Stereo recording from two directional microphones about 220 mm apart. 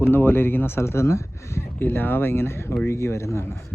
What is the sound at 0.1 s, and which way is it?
Speech, 10° left (ahead or behind).